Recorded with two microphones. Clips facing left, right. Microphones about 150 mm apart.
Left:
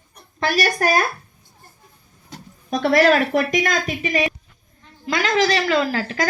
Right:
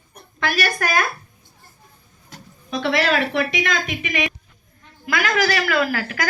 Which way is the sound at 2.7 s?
45° left (ahead or behind).